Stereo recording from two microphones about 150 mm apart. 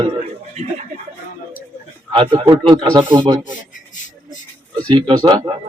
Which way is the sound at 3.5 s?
55° left (ahead or behind).